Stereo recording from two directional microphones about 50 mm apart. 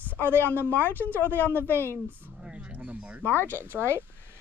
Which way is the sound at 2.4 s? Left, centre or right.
Centre.